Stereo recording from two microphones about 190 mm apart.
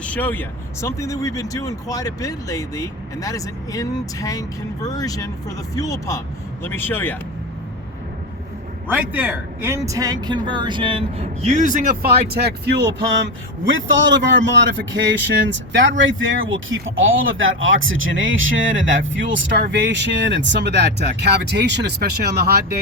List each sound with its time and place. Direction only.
0.0 s speech: 10° left (ahead or behind)
8.9 s a man's voice: 10° right (ahead or behind); by 12.7 s 55° right (ahead or behind)
13.7 s a man's voice: 75° right (ahead or behind)
15.8 s speech: 85° right; by 22.8 s 55° right (ahead or behind)